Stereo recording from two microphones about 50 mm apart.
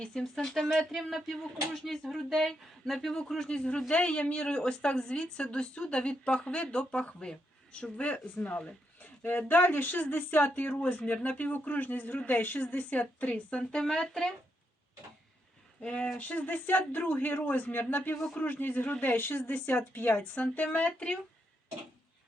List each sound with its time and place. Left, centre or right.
0.0 s speech: centre
0.7 s speech: centre; by 13.8 s left
13.8 s speech: centre
15.8 s speech: left